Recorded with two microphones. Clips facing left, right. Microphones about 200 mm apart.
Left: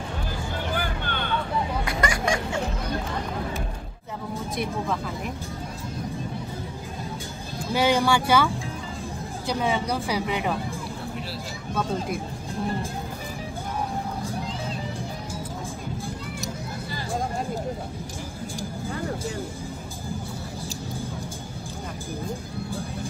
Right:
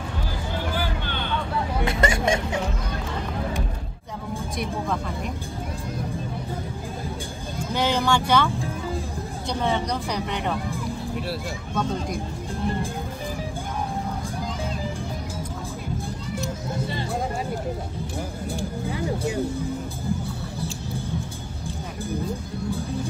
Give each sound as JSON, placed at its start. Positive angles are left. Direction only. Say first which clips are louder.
{"t": 0.7, "sound": "vehicle", "louder": "right 1 dB", "side_deg": 50}
{"t": 1.9, "sound": "vehicle", "louder": "right 6 dB", "side_deg": -25}
{"t": 7.7, "sound": "speech", "louder": "left 2 dB", "side_deg": 10}
{"t": 9.5, "sound": "speech", "louder": "even", "side_deg": 5}